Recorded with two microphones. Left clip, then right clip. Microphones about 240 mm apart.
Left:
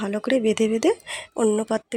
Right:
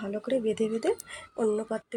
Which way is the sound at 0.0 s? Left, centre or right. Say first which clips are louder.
Left 7 dB; left.